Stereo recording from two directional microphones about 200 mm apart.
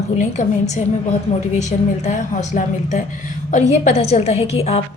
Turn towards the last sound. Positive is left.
turn(degrees=30)  # may be behind; listen again after turning